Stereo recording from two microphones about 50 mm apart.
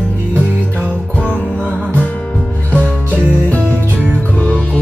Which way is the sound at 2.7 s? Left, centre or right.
Right.